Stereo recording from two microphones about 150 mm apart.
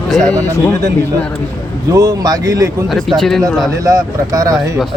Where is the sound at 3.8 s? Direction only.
25° right (ahead or behind).